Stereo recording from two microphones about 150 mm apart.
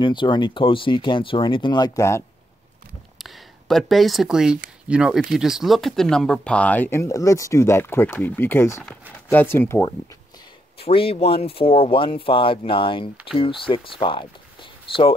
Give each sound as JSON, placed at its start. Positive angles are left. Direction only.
{"t": 0.0, "sound": "speech", "side_deg": 30}
{"t": 3.2, "sound": "speech", "side_deg": 0}
{"t": 10.8, "sound": "speech", "side_deg": 40}